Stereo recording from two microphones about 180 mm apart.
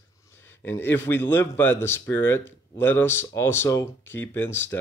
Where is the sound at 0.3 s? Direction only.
15° left (ahead or behind).